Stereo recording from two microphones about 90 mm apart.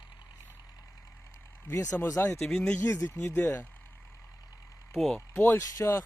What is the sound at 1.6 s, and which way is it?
Speech, 35° left (ahead or behind).